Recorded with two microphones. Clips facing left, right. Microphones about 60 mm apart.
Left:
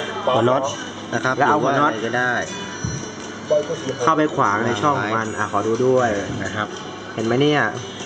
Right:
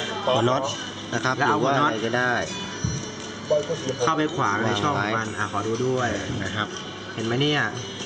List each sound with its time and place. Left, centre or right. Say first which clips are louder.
0.1 s a man's voice: left 4 dB; centre
3.5 s speech: left 4 dB; centre
4.0 s a man's voice: left 6 dB; centre
4.6 s a man's voice: left 4 dB; centre